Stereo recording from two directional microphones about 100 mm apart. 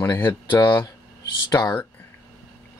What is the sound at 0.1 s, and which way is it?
Speech, 20° left (ahead or behind).